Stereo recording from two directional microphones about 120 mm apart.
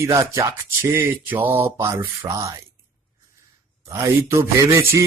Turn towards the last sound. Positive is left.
turn(degrees=-25)  # may be behind; listen again after turning